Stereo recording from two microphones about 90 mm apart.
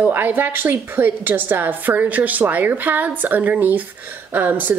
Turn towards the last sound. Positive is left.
turn(degrees=-20)  # may be behind; listen again after turning